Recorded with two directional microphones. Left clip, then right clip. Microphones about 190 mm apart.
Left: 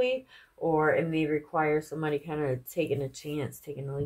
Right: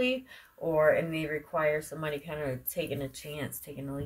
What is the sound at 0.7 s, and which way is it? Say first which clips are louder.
Speech: right 1 dB; 35° left (ahead or behind).